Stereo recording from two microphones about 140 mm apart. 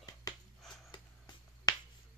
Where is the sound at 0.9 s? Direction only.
30° left (ahead or behind).